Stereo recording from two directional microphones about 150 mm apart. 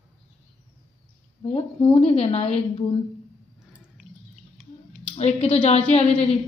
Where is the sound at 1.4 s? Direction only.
40° left (ahead or behind).